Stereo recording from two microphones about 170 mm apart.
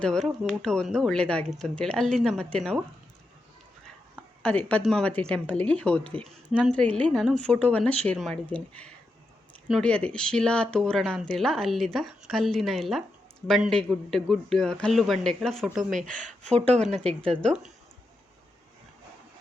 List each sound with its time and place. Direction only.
0.0 s speech: 5° left (ahead or behind)
4.4 s speech: 5° left (ahead or behind)
16.2 s speech: 45° right (ahead or behind)
17.2 s speech: 5° left (ahead or behind)